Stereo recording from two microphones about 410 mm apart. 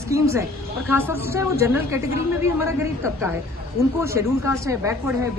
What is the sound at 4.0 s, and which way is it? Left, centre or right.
Speech, centre.